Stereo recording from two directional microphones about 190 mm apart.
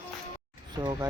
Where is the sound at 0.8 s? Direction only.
20° right (ahead or behind).